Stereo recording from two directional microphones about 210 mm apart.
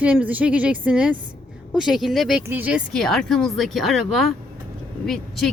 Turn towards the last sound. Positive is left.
turn(degrees=0)  # may be behind; listen again after turning